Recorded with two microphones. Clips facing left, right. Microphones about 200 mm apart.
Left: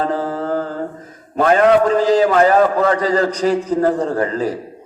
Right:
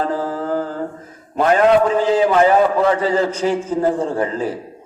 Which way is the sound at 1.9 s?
40° left (ahead or behind).